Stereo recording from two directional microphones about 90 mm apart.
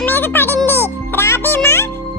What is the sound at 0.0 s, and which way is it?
Music, 25° left (ahead or behind).